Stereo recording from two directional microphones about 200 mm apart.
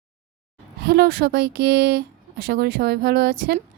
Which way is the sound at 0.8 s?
55° right (ahead or behind).